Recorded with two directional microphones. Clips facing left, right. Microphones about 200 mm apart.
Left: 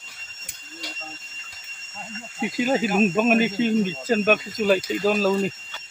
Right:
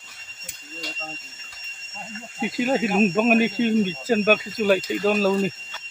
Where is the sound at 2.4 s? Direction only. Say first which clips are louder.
Even; centre (ahead or behind).